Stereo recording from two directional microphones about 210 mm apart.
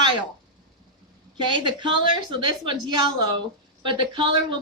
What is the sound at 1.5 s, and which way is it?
A woman's voice, 20° right (ahead or behind).